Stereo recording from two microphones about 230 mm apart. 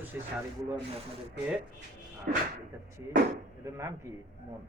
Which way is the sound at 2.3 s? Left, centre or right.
Right.